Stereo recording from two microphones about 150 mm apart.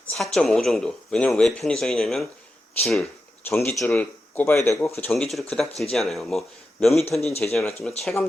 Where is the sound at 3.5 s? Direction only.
15° left (ahead or behind).